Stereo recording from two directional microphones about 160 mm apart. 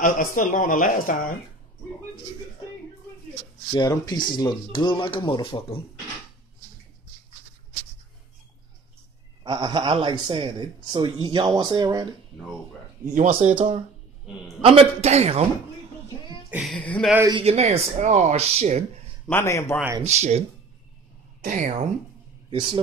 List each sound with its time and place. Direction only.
0.0 s speech: 55° left (ahead or behind)
3.7 s speech: 25° left (ahead or behind)
9.4 s speech: 25° right (ahead or behind)
13.3 s a man's voice: 40° right (ahead or behind)
16.4 s a sound: 10° right (ahead or behind)
16.7 s a man's voice: 5° left (ahead or behind)
17.3 s a man's voice: 35° right (ahead or behind)
19.2 s a man's voice: 15° left (ahead or behind)
20.0 s speech: 45° right (ahead or behind)
21.4 s a woman's voice: 55° right (ahead or behind)
22.5 s speech: 30° right (ahead or behind)